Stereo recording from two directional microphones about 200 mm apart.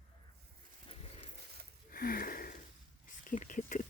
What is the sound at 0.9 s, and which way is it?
Horse, 30° left (ahead or behind).